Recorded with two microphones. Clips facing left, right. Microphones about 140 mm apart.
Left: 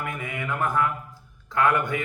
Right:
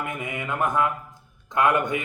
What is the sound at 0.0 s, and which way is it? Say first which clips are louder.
Mantra: right 1 dB; 20° right (ahead or behind).